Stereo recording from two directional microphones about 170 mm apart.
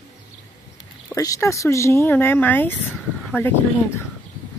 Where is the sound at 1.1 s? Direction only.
20° left (ahead or behind).